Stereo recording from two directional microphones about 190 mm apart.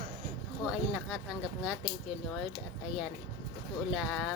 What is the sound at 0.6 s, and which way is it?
Speech, centre (ahead or behind).